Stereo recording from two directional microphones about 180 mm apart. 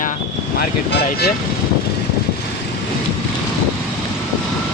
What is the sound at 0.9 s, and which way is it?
Speech, 70° left (ahead or behind).